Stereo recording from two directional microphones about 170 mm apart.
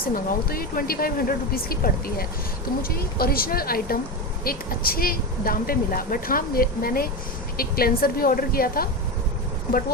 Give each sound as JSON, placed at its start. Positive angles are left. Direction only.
{"t": 0.1, "sound": "speech", "side_deg": 60}